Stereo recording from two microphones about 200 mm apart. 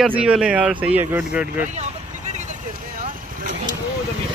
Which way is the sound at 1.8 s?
35° right (ahead or behind).